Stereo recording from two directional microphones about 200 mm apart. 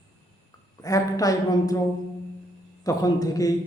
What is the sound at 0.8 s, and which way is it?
Speech, 15° left (ahead or behind).